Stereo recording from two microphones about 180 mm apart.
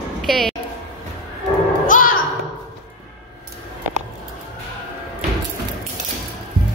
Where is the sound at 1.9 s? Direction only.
50° left (ahead or behind).